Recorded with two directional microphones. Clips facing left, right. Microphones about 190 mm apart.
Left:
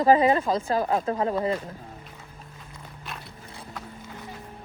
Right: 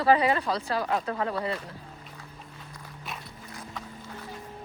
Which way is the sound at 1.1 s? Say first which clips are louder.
Left 4 dB; 25° left (ahead or behind).